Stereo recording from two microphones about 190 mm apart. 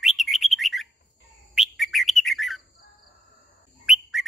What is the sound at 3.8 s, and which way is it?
Bird, centre (ahead or behind).